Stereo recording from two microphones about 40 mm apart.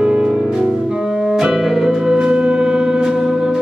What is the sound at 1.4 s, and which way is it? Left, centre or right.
Music, centre.